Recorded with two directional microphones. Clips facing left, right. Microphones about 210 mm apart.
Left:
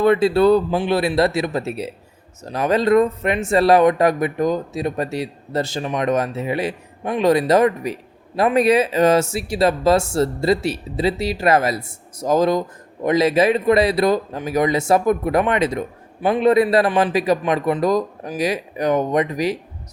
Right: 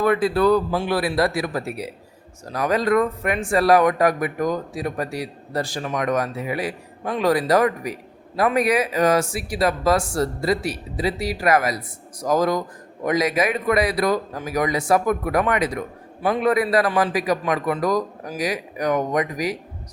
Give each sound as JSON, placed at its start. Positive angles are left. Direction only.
{"t": 0.0, "sound": "speech", "side_deg": 25}